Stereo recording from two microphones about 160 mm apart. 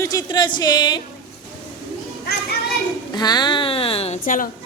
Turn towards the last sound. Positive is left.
turn(degrees=60)  # may be behind; listen again after turning